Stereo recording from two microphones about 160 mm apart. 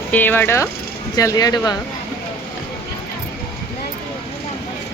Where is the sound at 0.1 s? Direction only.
10° left (ahead or behind).